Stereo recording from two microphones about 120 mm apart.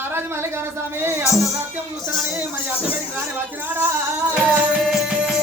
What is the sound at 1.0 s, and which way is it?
Music, 20° right (ahead or behind).